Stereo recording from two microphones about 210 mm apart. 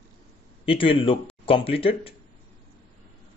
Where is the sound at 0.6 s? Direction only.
25° left (ahead or behind).